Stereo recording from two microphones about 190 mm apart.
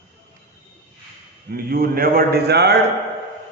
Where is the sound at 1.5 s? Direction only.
50° right (ahead or behind).